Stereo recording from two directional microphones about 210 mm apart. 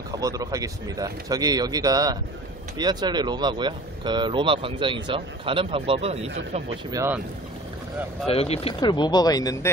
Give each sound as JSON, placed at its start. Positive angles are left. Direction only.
{"t": 0.2, "sound": "speech", "side_deg": -15}
{"t": 6.9, "sound": "speech", "side_deg": -15}
{"t": 8.3, "sound": "speech", "side_deg": 30}